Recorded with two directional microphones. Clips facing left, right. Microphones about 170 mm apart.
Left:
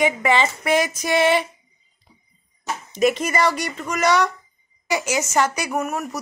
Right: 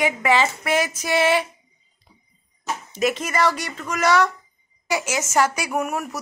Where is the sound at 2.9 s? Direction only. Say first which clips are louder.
Left 3 dB; centre (ahead or behind).